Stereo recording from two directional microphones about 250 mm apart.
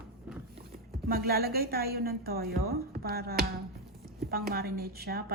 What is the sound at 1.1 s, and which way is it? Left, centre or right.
A woman's voice, right.